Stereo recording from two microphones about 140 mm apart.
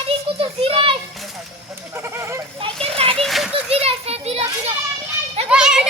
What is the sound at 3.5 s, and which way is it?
Children playing, 45° right (ahead or behind).